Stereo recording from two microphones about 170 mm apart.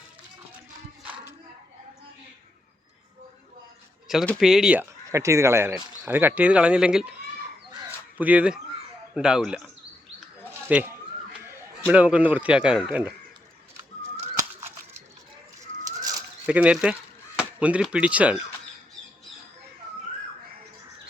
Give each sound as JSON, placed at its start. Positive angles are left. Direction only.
{"t": 4.4, "sound": "speech", "side_deg": -5}
{"t": 7.9, "sound": "a sound", "side_deg": -10}
{"t": 9.1, "sound": "speech", "side_deg": -5}
{"t": 10.7, "sound": "speech", "side_deg": -10}
{"t": 16.0, "sound": "bird", "side_deg": -20}
{"t": 16.5, "sound": "speech", "side_deg": -5}